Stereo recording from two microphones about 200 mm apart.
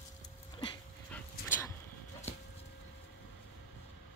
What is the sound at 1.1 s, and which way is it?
Dog, 10° left (ahead or behind).